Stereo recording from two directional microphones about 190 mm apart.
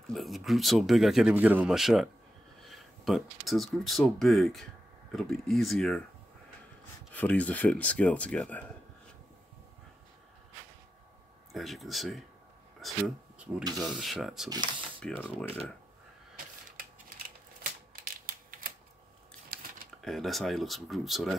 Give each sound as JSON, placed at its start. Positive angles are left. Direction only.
{"t": 0.1, "sound": "speech", "side_deg": 0}
{"t": 7.2, "sound": "speech", "side_deg": 5}
{"t": 11.5, "sound": "speech", "side_deg": 0}
{"t": 18.0, "sound": "typewriter", "side_deg": -50}
{"t": 19.5, "sound": "a sound", "side_deg": -50}
{"t": 20.0, "sound": "speech", "side_deg": 0}